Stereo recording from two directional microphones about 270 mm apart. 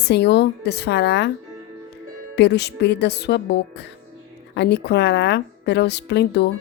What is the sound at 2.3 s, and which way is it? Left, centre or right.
A woman's voice, left.